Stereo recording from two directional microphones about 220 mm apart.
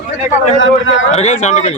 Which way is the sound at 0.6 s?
60° left (ahead or behind).